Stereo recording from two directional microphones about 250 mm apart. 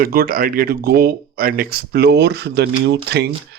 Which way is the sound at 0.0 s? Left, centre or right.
Right.